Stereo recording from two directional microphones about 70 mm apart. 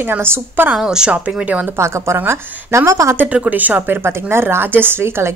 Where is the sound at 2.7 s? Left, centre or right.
Right.